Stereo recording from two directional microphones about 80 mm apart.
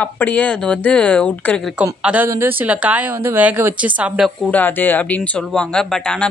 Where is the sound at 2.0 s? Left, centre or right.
Centre.